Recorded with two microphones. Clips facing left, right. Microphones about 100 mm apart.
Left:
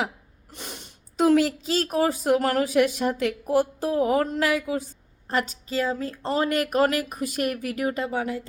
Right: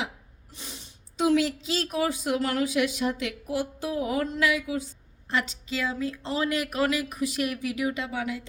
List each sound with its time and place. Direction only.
0.5 s speech: 60° left (ahead or behind); by 8.4 s 40° left (ahead or behind)